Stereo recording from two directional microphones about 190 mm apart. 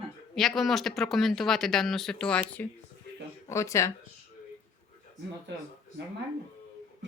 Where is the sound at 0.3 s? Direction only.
Centre (ahead or behind).